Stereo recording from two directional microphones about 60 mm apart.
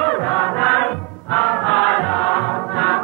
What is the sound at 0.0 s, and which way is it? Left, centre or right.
Chant, left.